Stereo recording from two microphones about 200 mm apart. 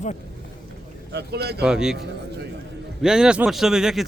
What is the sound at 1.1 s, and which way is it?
Speech, 55° right (ahead or behind).